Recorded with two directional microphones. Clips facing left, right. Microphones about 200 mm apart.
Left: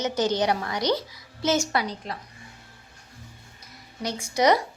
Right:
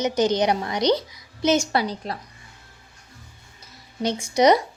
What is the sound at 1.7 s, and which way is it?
Speech, 30° right (ahead or behind).